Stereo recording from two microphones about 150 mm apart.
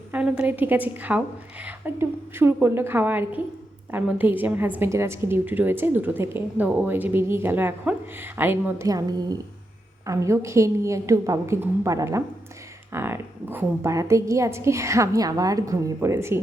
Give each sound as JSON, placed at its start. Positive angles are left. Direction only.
{"t": 0.1, "sound": "a woman's voice", "side_deg": -10}